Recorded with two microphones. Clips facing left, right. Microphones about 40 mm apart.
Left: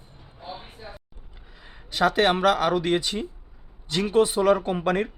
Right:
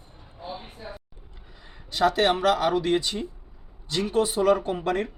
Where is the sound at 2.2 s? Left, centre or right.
Left.